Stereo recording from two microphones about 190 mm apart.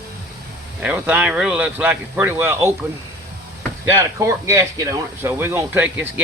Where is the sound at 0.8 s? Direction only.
10° right (ahead or behind).